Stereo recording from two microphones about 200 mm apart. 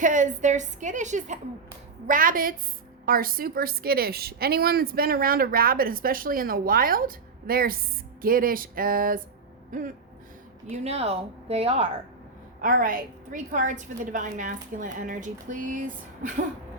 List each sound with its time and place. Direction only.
0.0 s a woman's voice: 40° right (ahead or behind)
10.7 s a woman's voice: 30° right (ahead or behind)
12.6 s a woman's voice: 45° right (ahead or behind)